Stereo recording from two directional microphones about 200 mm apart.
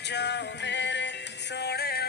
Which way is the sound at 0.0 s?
60° left (ahead or behind).